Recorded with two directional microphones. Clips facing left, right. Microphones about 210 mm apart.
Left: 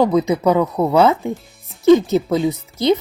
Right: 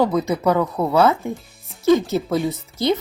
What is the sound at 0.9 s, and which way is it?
Speech, 20° left (ahead or behind).